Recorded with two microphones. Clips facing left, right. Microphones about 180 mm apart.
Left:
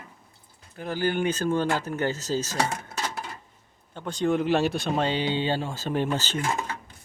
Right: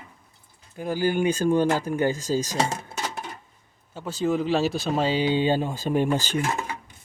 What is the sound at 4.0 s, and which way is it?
Speech, 5° right (ahead or behind).